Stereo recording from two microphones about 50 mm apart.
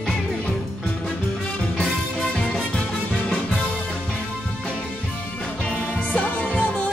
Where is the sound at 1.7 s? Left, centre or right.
Centre.